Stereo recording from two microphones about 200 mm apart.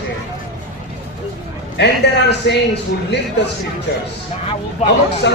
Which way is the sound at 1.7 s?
60° left (ahead or behind).